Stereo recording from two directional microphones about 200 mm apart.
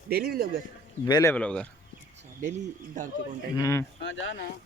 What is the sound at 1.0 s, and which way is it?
Speech, 15° left (ahead or behind).